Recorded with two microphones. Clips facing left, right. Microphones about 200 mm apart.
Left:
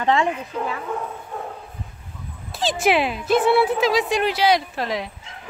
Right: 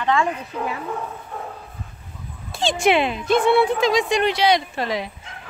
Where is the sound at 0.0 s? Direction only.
25° left (ahead or behind).